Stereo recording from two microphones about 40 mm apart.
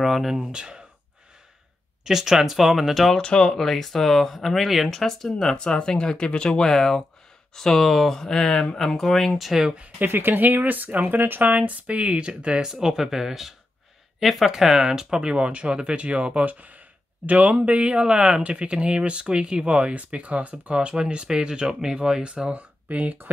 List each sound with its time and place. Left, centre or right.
0.0 s speech: centre
0.4 s speech: right
2.0 s speech: centre
3.2 s speech: left
3.5 s speech: centre
5.0 s speech: centre
9.4 s speech: centre
10.0 s speech: right
11.1 s speech: right
12.6 s speech: centre
14.5 s speech: centre; by 17.6 s right
17.6 s speech: right